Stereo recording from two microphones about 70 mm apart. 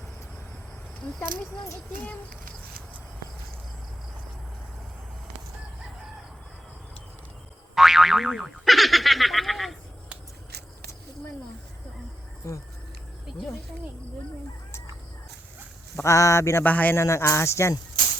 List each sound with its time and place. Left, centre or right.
7.8 s boing: centre
16.0 s speech: left
16.6 s speech: left
16.9 s speech: left